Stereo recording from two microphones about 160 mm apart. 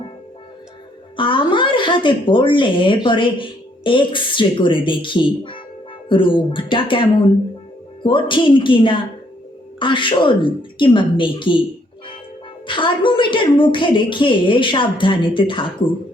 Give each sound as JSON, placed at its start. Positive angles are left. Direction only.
{"t": 1.1, "sound": "speech", "side_deg": 30}
{"t": 12.6, "sound": "speech", "side_deg": 30}